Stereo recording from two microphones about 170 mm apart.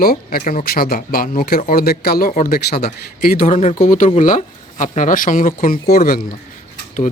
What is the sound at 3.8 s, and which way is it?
Speech, 50° left (ahead or behind).